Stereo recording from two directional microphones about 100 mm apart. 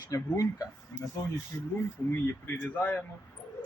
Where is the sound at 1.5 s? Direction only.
30° left (ahead or behind).